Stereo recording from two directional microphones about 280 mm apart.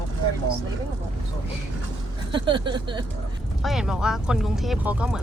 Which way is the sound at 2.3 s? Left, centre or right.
Centre.